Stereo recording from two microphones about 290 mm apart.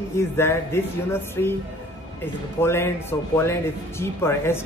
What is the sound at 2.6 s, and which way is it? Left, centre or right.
Speech, centre.